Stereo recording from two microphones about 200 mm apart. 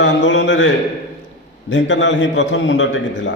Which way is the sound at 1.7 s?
65° left (ahead or behind).